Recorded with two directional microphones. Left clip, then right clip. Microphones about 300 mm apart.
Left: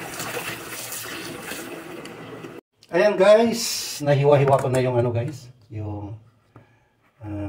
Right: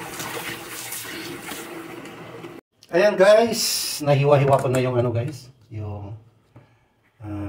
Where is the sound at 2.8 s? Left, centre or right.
Centre.